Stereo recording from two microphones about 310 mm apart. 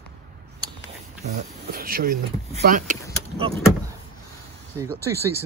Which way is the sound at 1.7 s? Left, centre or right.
Right.